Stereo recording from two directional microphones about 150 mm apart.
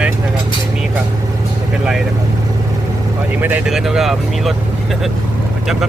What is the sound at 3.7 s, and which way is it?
Speech, centre (ahead or behind).